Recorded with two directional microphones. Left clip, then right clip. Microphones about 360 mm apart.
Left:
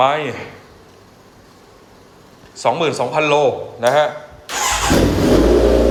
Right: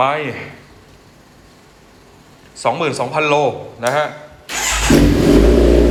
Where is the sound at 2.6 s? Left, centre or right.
Centre.